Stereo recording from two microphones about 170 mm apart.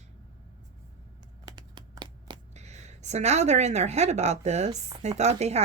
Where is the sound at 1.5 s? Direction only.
25° right (ahead or behind).